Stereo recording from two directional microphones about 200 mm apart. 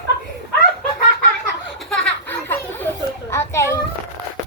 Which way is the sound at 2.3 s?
10° left (ahead or behind).